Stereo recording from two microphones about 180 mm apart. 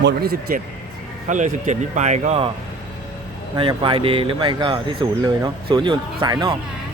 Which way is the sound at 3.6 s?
30° right (ahead or behind).